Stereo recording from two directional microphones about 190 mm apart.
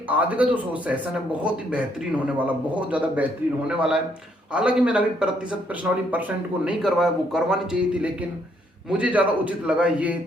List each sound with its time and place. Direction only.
0.1 s a man's voice: 10° right (ahead or behind)